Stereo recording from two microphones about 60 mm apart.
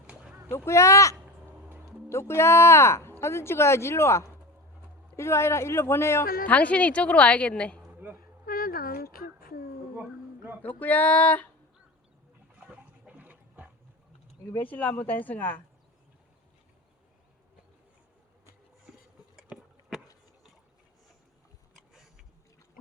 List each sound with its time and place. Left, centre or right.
0.1 s a sound: centre
0.5 s speech: left
2.0 s speech: left
6.5 s speech: left
8.0 s speech: right
10.6 s speech: left
12.5 s a sound: right
14.5 s speech: left
18.9 s a sound: centre